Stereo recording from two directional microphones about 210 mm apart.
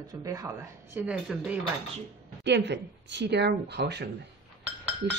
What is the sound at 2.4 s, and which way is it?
Speech, 55° right (ahead or behind).